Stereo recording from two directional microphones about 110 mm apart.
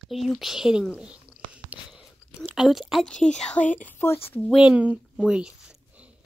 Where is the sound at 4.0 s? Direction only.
20° left (ahead or behind).